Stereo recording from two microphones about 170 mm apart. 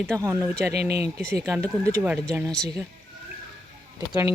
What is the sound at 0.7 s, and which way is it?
Speech, 70° right (ahead or behind).